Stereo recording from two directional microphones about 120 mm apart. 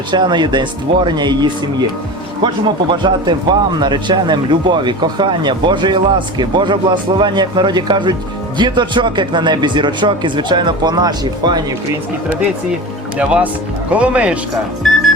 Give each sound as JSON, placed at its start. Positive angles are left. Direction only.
{"t": 0.1, "sound": "speech", "side_deg": -40}
{"t": 2.9, "sound": "speech", "side_deg": -40}
{"t": 13.1, "sound": "speech", "side_deg": -10}